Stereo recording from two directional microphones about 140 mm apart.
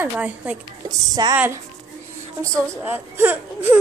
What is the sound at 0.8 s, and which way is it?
Speech, 30° right (ahead or behind).